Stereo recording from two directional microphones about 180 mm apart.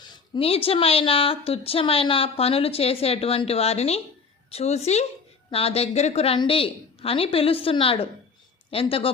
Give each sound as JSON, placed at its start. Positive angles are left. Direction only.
{"t": 0.0, "sound": "speech", "side_deg": 25}